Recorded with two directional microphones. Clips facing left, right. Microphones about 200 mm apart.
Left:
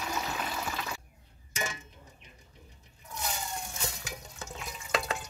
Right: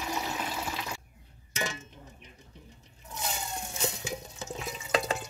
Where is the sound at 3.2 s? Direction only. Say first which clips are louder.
Right 1 dB; 25° right (ahead or behind).